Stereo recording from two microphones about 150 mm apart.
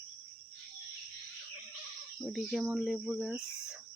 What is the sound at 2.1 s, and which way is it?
Speech, centre (ahead or behind).